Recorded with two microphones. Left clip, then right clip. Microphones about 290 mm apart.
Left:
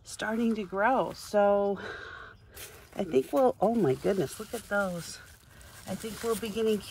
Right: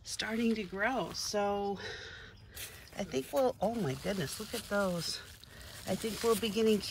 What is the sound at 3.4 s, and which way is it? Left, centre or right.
Speech, left.